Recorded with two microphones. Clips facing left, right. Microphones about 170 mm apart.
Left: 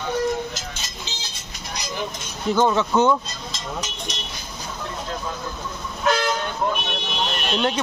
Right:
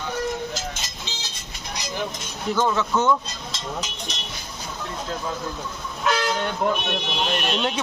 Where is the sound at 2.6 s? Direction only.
25° left (ahead or behind).